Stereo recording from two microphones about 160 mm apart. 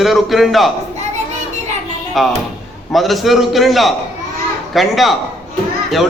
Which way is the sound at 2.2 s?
Centre (ahead or behind).